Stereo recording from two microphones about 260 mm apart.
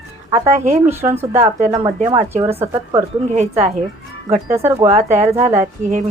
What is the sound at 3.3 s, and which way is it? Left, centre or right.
Speech, right.